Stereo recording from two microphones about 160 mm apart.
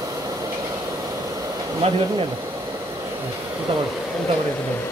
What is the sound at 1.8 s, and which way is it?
Speech, 40° right (ahead or behind).